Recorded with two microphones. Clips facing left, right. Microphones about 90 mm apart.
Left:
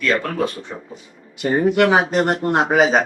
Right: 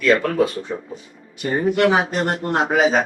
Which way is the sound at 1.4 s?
55° left (ahead or behind).